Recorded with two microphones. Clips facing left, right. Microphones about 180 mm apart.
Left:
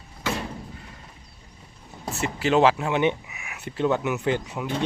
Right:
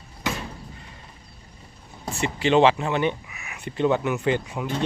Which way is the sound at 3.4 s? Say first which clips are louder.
Right 2 dB; 5° left (ahead or behind).